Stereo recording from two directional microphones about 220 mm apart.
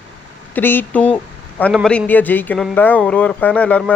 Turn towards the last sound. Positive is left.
turn(degrees=5)  # may be behind; listen again after turning